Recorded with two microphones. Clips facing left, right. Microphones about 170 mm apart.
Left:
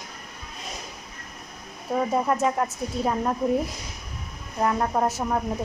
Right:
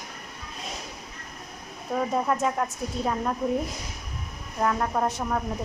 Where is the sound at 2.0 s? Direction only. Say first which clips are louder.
Left 2 dB; 5° left (ahead or behind).